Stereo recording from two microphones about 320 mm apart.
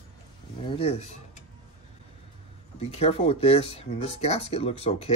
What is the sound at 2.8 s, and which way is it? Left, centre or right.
Speech, centre.